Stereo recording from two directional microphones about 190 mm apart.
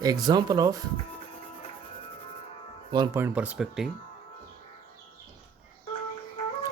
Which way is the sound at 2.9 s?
20° right (ahead or behind).